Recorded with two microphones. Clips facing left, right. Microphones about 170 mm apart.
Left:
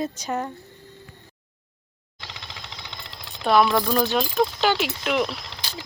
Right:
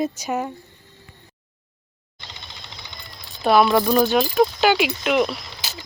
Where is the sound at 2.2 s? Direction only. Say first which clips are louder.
Left 2 dB; 90° left.